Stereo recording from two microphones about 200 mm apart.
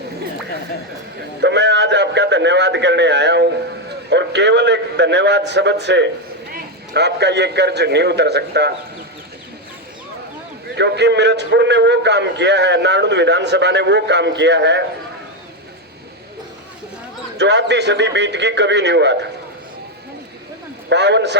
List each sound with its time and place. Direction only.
1.4 s a man's voice: 60° right (ahead or behind)
10.8 s a man's voice: 60° right (ahead or behind)
17.3 s a man's voice: 60° right (ahead or behind)
20.9 s a man's voice: 60° right (ahead or behind)